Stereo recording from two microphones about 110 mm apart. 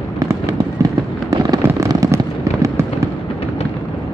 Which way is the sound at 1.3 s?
30° right (ahead or behind).